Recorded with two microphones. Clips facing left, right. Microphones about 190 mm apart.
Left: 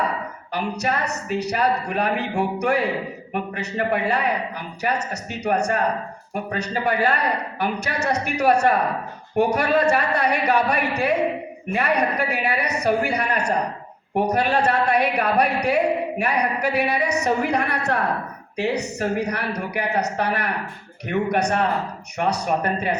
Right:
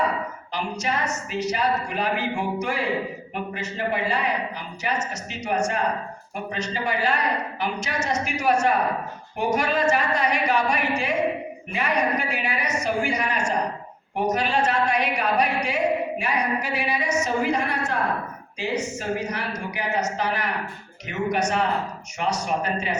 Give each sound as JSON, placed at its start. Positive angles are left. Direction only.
{"t": 0.5, "sound": "a woman's voice", "side_deg": 60}